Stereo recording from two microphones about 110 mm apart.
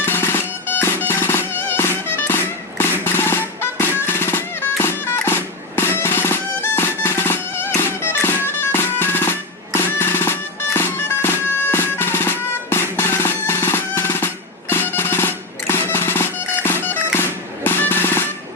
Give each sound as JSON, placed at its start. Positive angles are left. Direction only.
{"t": 0.0, "sound": "music", "side_deg": 20}
{"t": 10.8, "sound": "bagpipes", "side_deg": 20}
{"t": 14.7, "sound": "music", "side_deg": 20}